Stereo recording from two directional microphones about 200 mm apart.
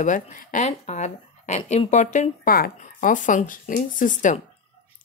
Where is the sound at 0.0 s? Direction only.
40° left (ahead or behind).